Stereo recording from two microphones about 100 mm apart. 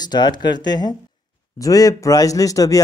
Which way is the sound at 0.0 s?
45° left (ahead or behind).